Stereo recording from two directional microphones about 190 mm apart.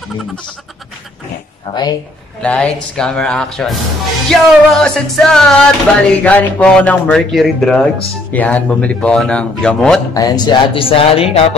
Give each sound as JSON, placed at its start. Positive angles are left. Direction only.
{"t": 1.7, "sound": "speech", "side_deg": 20}
{"t": 2.4, "sound": "music", "side_deg": 5}
{"t": 10.1, "sound": "speech", "side_deg": 20}